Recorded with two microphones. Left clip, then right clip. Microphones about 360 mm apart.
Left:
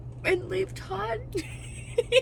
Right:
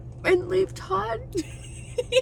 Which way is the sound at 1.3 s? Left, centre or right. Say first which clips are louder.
Right 3 dB; centre.